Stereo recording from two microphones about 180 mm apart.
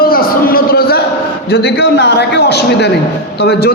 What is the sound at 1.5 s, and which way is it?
A man's voice, 60° left (ahead or behind).